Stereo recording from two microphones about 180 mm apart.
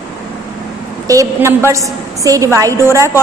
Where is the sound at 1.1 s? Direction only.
15° right (ahead or behind).